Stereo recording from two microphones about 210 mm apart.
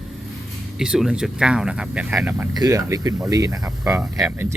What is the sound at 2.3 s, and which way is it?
Speech, 15° right (ahead or behind).